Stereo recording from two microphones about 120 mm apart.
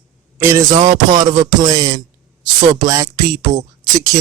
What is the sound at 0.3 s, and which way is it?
Speech, 20° right (ahead or behind).